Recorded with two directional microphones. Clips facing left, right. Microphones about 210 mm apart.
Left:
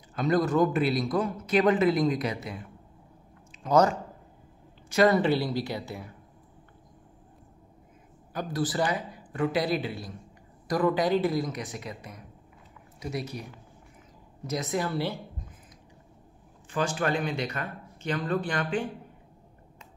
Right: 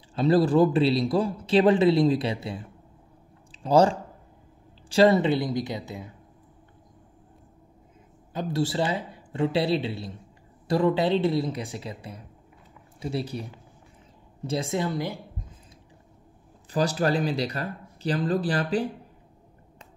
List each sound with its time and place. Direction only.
0.1 s a man's voice: 30° right (ahead or behind)
8.3 s a man's voice: 25° right (ahead or behind)
16.7 s speech: 35° right (ahead or behind)